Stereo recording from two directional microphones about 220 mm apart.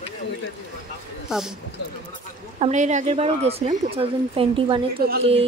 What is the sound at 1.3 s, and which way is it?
Speech, centre (ahead or behind).